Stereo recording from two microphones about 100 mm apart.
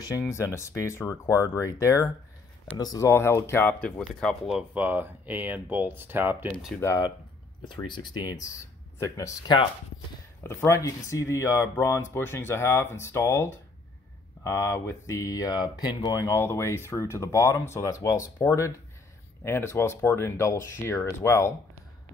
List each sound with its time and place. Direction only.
0.3 s speech: 25° left (ahead or behind)
2.8 s speech: 40° left (ahead or behind)
3.1 s speech: 25° left (ahead or behind)
4.2 s speech: 5° left (ahead or behind)
4.7 s speech: 15° right (ahead or behind)
7.6 s speech: 50° left (ahead or behind); by 9.3 s 30° left (ahead or behind)
9.5 s speech: 50° left (ahead or behind)
10.4 s speech: 25° left (ahead or behind); by 16.1 s 40° left (ahead or behind)
16.1 s speech: 25° left (ahead or behind)